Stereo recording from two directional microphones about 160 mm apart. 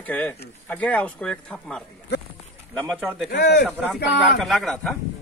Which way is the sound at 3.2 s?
80° left.